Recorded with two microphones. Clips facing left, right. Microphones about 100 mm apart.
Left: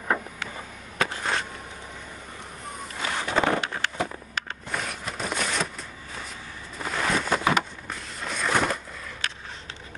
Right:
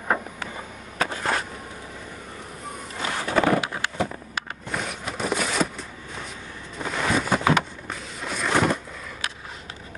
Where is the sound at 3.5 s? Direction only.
15° right (ahead or behind).